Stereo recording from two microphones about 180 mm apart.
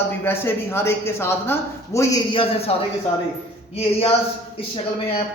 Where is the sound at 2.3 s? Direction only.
30° left (ahead or behind).